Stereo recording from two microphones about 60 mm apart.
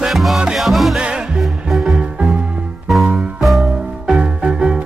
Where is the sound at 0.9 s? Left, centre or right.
Centre.